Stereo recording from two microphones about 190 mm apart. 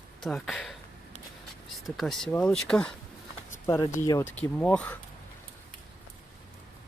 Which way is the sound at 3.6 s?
15° left (ahead or behind).